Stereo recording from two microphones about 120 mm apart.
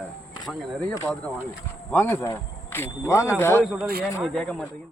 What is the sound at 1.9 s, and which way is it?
Speech, 20° left (ahead or behind).